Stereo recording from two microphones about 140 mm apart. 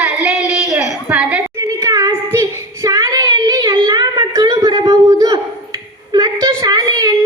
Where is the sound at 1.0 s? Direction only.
10° right (ahead or behind).